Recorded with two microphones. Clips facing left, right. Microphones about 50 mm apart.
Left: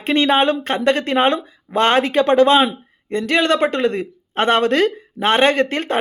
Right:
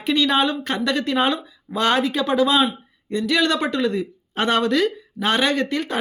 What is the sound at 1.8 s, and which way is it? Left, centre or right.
Speech, left.